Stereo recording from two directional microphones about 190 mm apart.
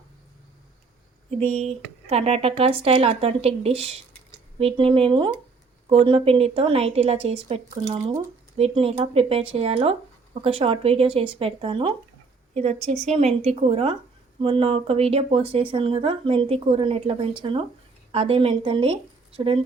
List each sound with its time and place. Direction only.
1.4 s speech: 35° right (ahead or behind)